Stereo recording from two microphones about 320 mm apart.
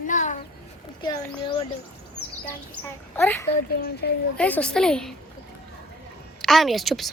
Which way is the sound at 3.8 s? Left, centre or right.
Left.